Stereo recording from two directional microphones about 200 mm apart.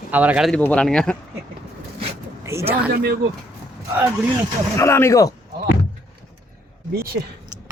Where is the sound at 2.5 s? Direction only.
15° right (ahead or behind).